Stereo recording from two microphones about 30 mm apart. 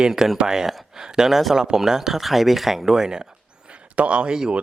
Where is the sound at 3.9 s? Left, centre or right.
Right.